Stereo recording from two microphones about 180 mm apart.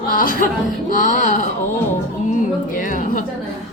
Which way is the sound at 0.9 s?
45° left (ahead or behind).